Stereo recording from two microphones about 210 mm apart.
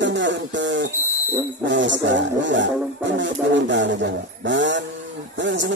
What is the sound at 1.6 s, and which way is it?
Speech, 60° right (ahead or behind).